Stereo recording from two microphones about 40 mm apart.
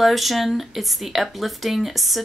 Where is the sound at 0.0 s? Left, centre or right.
Centre.